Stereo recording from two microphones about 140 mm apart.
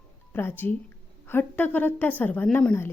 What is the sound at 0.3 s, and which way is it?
Speech, 15° left (ahead or behind).